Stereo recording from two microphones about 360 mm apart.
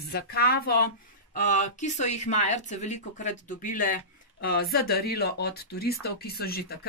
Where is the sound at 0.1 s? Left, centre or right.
Left.